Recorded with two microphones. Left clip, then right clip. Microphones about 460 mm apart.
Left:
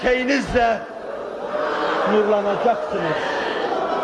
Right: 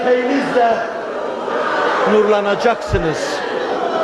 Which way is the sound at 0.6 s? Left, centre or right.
Left.